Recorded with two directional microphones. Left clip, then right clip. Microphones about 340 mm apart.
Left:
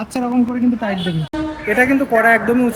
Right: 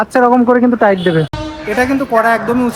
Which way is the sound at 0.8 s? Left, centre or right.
Centre.